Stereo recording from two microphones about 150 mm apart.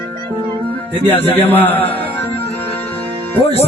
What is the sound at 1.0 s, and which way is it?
Speech, 15° left (ahead or behind).